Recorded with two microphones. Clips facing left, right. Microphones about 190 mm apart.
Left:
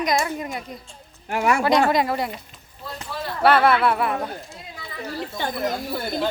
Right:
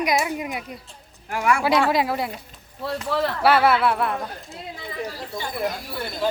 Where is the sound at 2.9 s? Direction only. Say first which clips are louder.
Right 8 dB; 75° right (ahead or behind).